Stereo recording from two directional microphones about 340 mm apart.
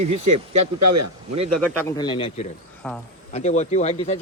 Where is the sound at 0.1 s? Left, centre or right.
Right.